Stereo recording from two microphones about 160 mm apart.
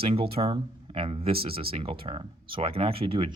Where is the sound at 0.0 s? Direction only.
40° right (ahead or behind).